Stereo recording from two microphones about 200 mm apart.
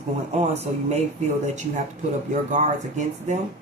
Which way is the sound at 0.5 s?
30° right (ahead or behind).